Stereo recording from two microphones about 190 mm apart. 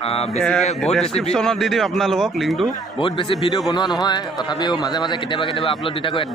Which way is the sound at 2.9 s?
25° left (ahead or behind).